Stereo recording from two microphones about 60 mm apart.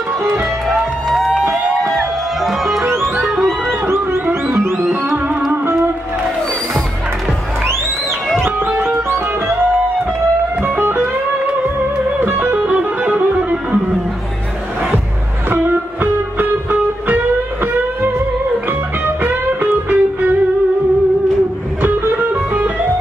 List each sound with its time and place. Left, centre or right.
0.7 s music: centre
3.8 s music: right
8.7 s music: right
10.6 s music: right
12.2 s music: right
12.6 s music: centre
15.5 s music: right
18.7 s music: right
21.8 s music: right